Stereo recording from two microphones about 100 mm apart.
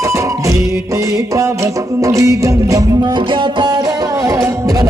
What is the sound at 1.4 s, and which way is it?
Music, 30° right (ahead or behind).